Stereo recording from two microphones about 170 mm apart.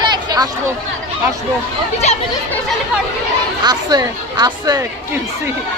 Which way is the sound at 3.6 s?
25° right (ahead or behind).